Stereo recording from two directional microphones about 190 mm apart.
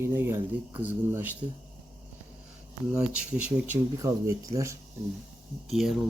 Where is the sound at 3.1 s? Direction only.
5° right (ahead or behind).